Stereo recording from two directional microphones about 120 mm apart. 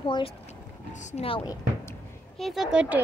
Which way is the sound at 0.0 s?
45° left (ahead or behind).